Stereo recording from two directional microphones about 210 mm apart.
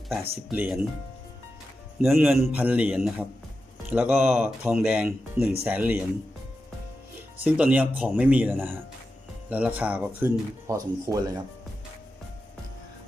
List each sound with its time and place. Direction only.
0.1 s speech: 5° right (ahead or behind)
2.3 s a man's voice: 5° right (ahead or behind)
7.3 s speech: 5° right (ahead or behind)